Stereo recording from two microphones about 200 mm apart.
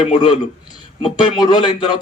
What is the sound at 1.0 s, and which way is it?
Speech, 20° left (ahead or behind).